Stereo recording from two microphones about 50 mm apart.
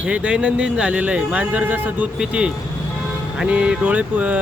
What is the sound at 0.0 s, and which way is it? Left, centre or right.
Speech, right.